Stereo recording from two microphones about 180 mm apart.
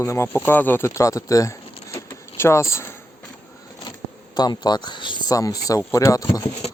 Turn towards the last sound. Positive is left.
turn(degrees=20)  # may be behind; listen again after turning